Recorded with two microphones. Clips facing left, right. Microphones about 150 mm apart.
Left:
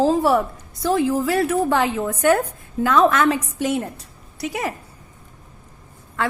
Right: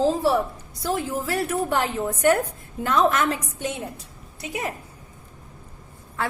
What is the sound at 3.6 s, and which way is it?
A woman's voice, 85° left.